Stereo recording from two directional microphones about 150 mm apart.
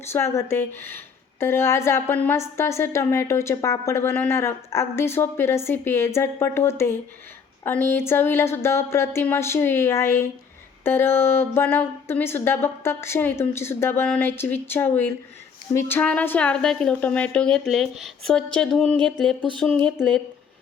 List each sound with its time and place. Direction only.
0.1 s a woman's voice: 20° left (ahead or behind)